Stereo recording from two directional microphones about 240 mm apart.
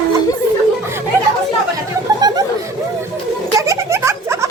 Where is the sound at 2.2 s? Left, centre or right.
Centre.